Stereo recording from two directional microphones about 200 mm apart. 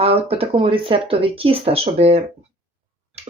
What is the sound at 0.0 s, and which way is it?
Speech, 30° right (ahead or behind).